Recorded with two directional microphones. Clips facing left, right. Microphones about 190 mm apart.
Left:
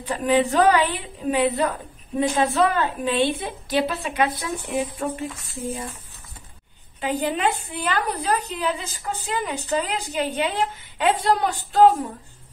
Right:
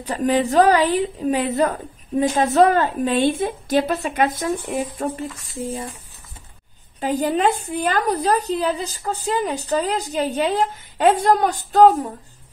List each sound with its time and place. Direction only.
0.0 s a woman's voice: 40° right (ahead or behind)
7.0 s a woman's voice: 40° right (ahead or behind)